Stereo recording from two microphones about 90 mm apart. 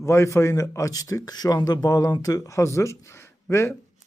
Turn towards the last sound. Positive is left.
turn(degrees=30)  # may be behind; listen again after turning